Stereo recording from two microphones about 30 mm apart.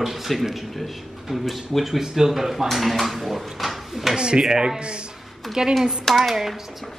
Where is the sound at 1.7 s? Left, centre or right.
Centre.